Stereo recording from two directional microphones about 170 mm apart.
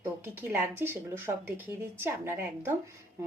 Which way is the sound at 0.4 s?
10° right (ahead or behind).